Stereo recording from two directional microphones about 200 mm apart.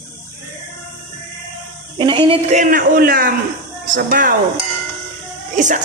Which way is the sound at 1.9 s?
25° right (ahead or behind).